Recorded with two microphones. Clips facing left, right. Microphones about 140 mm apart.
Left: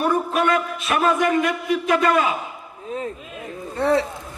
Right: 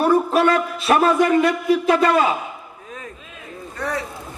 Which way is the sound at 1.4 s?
30° right (ahead or behind).